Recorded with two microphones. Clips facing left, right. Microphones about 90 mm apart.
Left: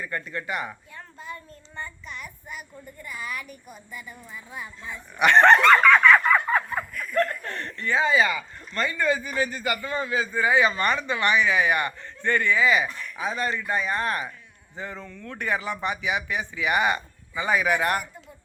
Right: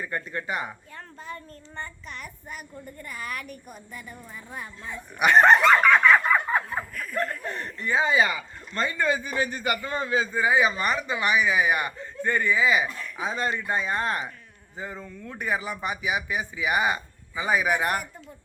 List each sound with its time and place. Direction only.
0.0 s speech: 25° right (ahead or behind)
0.9 s a child's voice: 40° right (ahead or behind)
5.2 s speech: 10° right (ahead or behind)
10.5 s speech: 5° right (ahead or behind); by 14.3 s 25° right (ahead or behind)
14.8 s speech: 10° right (ahead or behind)